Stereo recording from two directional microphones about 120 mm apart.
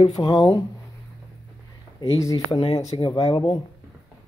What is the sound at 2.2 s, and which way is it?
Speech, 25° left (ahead or behind).